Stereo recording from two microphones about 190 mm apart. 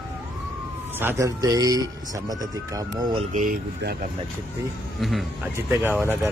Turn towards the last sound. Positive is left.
turn(degrees=-10)  # may be behind; listen again after turning